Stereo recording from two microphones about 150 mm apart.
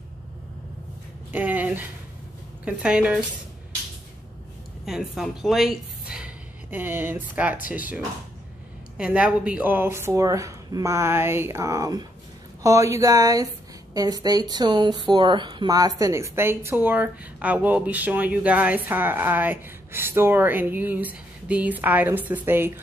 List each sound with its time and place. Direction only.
1.3 s a sound: 10° right (ahead or behind)
2.6 s speech: 5° right (ahead or behind)
4.8 s a woman's voice: centre (ahead or behind)